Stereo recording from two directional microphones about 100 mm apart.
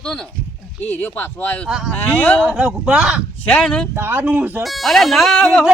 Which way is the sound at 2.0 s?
20° left (ahead or behind).